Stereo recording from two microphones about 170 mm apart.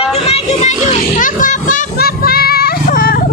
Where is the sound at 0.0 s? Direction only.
40° left (ahead or behind).